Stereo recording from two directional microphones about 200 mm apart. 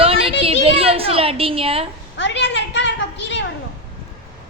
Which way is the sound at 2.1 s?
65° left (ahead or behind).